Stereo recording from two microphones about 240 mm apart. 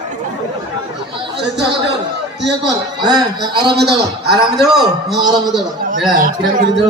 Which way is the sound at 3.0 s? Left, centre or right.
Centre.